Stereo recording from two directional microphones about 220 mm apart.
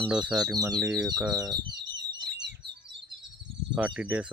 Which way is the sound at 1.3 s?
15° right (ahead or behind).